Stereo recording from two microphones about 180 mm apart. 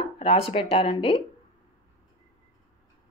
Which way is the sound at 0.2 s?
30° left (ahead or behind).